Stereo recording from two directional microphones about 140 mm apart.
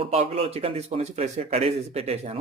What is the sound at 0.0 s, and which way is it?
A man's voice, 45° right (ahead or behind).